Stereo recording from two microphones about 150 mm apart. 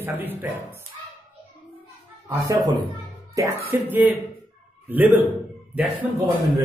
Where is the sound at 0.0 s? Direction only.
15° right (ahead or behind).